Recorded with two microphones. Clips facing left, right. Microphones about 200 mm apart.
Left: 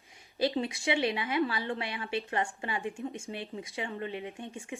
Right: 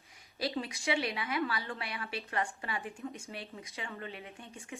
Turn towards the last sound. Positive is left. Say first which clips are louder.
# left 7 dB
turn(degrees=25)  # may be behind; listen again after turning